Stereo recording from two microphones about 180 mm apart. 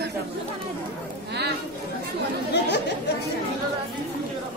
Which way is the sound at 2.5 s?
70° left (ahead or behind).